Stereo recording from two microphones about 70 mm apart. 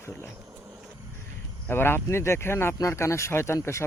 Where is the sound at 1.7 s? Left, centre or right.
Left.